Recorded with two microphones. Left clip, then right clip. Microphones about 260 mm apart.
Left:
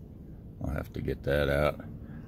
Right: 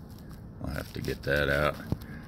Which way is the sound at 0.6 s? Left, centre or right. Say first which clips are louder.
Even; centre.